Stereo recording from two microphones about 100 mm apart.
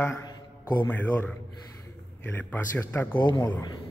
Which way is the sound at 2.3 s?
20° left (ahead or behind).